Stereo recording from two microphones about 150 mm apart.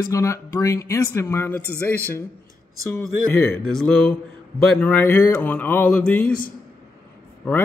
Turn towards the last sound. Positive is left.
turn(degrees=10)  # may be behind; listen again after turning